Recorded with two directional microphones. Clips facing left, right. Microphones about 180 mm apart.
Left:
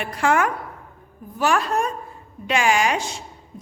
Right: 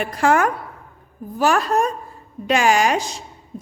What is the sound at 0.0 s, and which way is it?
A woman's voice, 40° right (ahead or behind).